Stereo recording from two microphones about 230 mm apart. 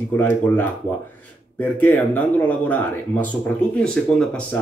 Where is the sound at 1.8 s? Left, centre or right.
Centre.